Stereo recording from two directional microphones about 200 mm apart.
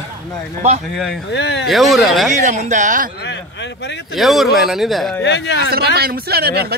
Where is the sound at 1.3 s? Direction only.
55° left (ahead or behind).